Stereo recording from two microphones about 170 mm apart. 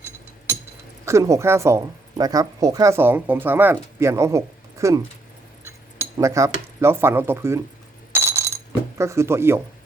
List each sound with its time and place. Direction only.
1.0 s speech: 20° right (ahead or behind)
8.1 s a sound: 15° right (ahead or behind)
9.0 s speech: 15° right (ahead or behind)